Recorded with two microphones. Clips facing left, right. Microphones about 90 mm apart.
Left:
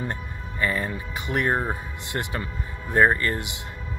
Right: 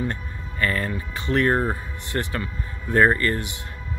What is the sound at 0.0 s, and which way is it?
Speech, 20° left (ahead or behind).